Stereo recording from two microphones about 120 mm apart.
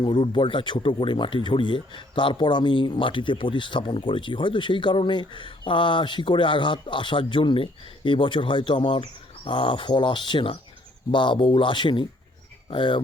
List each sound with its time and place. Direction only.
0.0 s speech: 45° left (ahead or behind)